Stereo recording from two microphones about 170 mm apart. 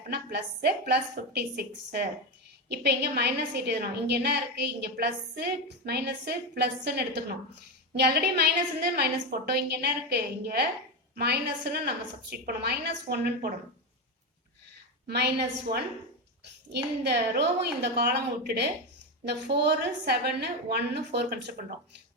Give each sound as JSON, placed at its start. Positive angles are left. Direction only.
{"t": 0.1, "sound": "a woman's voice", "side_deg": -70}
{"t": 15.0, "sound": "a woman's voice", "side_deg": -80}